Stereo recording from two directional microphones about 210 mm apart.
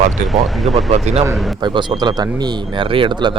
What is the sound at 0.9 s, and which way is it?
Speech, 30° right (ahead or behind).